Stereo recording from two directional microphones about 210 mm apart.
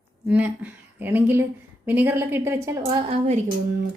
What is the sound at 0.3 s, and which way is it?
A woman's voice, 5° right (ahead or behind).